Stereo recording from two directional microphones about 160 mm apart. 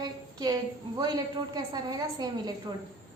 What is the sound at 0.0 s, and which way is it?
A woman's voice, 25° right (ahead or behind).